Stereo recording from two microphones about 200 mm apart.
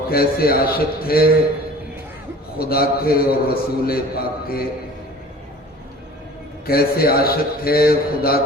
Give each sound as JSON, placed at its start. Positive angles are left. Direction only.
{"t": 0.1, "sound": "a man's voice", "side_deg": 50}
{"t": 2.6, "sound": "a man's voice", "side_deg": 50}
{"t": 6.7, "sound": "a man's voice", "side_deg": 50}